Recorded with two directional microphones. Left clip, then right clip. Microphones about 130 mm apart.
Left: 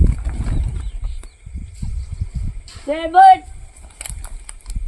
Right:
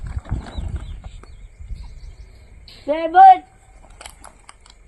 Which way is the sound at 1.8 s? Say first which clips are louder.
Left 14 dB; 60° left (ahead or behind).